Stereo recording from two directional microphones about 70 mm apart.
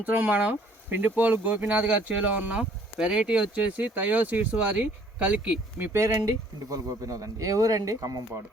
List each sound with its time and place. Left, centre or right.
0.0 s speech: right
5.8 s speech: right
6.1 s speech: right